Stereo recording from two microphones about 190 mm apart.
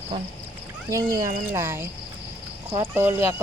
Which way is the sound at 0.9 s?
15° right (ahead or behind).